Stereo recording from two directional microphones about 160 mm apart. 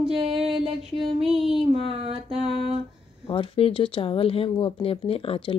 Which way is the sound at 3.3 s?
35° left (ahead or behind).